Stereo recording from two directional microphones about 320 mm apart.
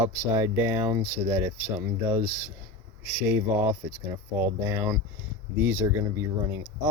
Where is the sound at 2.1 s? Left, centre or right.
Right.